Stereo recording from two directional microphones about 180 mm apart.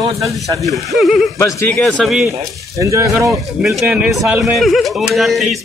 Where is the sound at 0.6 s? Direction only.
Centre (ahead or behind).